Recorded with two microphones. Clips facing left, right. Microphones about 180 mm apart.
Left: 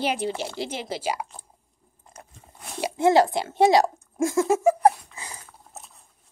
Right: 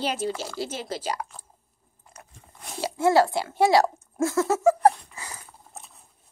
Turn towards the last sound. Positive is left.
turn(degrees=0)  # may be behind; listen again after turning